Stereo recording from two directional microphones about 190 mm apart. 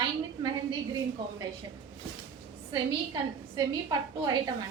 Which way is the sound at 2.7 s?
20° right (ahead or behind).